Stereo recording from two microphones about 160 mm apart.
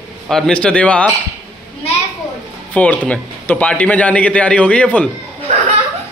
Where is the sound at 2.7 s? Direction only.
10° left (ahead or behind).